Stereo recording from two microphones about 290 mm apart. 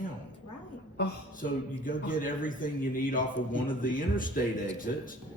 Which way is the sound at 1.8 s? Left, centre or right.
Left.